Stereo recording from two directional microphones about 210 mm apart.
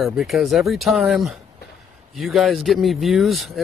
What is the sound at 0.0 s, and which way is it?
Speech, centre (ahead or behind).